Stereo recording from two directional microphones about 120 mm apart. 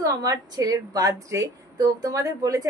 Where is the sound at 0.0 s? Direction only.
30° right (ahead or behind).